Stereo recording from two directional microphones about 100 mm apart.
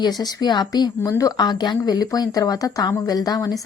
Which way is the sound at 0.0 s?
45° left (ahead or behind).